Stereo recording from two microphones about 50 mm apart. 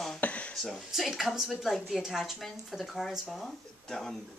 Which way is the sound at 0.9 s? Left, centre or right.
Centre.